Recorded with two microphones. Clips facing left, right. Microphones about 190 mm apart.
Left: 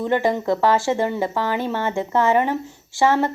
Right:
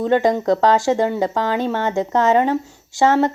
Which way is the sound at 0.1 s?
20° right (ahead or behind).